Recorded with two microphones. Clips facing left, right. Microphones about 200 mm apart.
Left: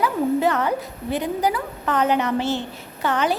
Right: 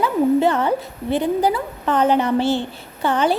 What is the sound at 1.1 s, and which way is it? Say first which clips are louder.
A woman's voice: right 4 dB; 30° right (ahead or behind).